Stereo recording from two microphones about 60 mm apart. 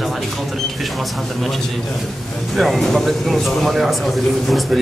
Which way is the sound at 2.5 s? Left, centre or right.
Centre.